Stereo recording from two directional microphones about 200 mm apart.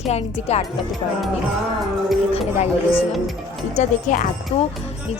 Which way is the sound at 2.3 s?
30° left (ahead or behind).